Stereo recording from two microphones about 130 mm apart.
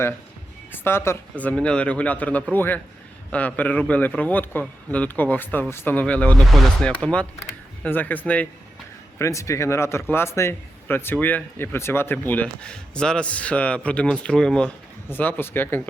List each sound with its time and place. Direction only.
0.7 s speech: 20° left (ahead or behind)
9.1 s speech: 20° left (ahead or behind)